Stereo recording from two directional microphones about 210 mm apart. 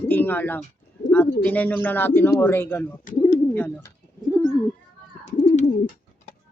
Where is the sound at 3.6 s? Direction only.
10° left (ahead or behind).